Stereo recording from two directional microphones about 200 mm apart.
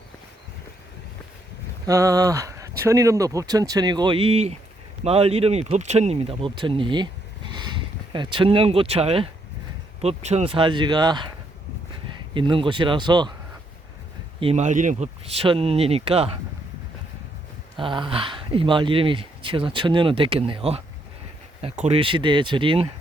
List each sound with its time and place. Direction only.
1.9 s speech: 15° right (ahead or behind)
12.3 s speech: 25° right (ahead or behind)
14.3 s speech: 30° right (ahead or behind)
17.7 s speech: 25° right (ahead or behind)